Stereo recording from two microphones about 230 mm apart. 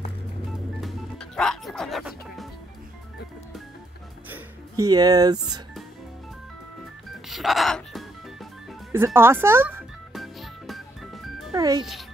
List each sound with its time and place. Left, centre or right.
0.7 s music: centre
4.3 s music: centre
7.2 s music: centre
11.5 s a child's voice: centre
11.8 s a child's voice: centre